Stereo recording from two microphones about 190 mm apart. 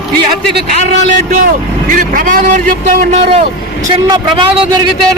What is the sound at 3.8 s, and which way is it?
Speech, 25° right (ahead or behind).